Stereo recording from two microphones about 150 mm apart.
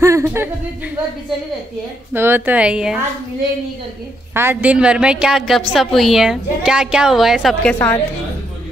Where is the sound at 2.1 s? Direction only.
15° right (ahead or behind).